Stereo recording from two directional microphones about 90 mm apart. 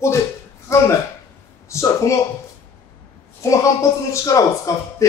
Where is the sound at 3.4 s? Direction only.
35° left (ahead or behind).